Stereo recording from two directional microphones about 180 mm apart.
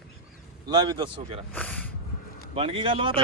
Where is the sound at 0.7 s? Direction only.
25° right (ahead or behind).